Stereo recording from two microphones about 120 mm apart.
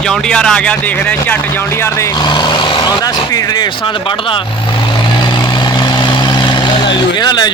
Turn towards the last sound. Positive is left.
turn(degrees=35)  # may be behind; listen again after turning